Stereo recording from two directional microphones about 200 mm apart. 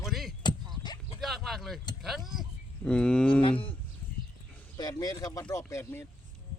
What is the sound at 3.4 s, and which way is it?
Speech, 25° left (ahead or behind).